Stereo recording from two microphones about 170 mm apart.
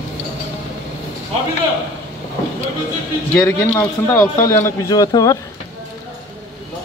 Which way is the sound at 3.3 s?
15° left (ahead or behind).